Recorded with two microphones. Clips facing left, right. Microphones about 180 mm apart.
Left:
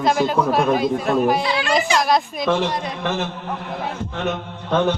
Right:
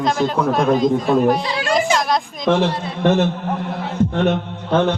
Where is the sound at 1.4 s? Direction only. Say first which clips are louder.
Even; 40° right (ahead or behind).